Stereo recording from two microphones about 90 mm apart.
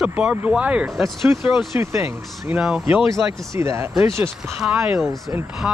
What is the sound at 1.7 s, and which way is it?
Speech, 30° right (ahead or behind).